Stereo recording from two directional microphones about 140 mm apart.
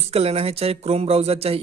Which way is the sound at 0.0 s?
45° right (ahead or behind).